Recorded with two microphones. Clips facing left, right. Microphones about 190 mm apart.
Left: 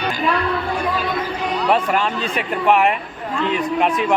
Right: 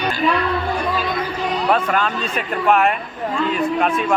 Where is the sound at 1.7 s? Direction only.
15° left (ahead or behind).